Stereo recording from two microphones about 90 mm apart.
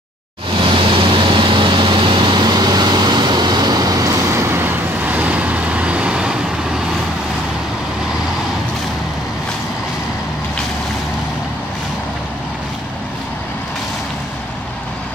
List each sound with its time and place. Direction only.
0.6 s vehicle: 75° right (ahead or behind); by 4.1 s 45° right (ahead or behind)
4.3 s vehicle: 30° right (ahead or behind); by 6.3 s 10° right (ahead or behind)